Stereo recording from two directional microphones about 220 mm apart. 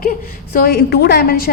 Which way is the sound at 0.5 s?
45° left (ahead or behind).